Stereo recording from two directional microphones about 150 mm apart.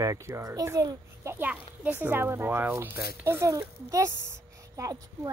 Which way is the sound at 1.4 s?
10° right (ahead or behind).